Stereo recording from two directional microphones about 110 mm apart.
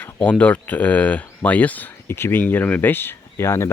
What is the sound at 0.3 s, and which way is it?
Speech, 10° left (ahead or behind).